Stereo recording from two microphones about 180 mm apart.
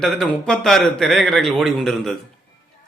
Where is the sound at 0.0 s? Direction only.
Centre (ahead or behind).